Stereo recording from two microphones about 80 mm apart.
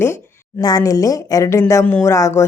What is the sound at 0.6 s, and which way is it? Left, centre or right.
A woman's voice, left.